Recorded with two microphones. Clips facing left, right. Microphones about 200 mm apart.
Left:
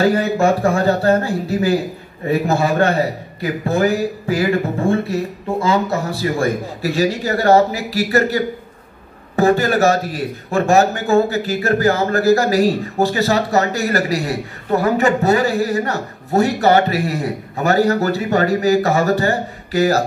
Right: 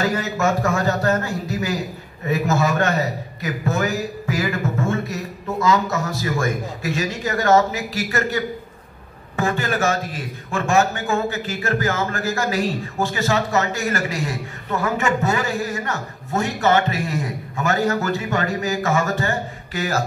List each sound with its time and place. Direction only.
0.0 s a man's voice: 30° left (ahead or behind)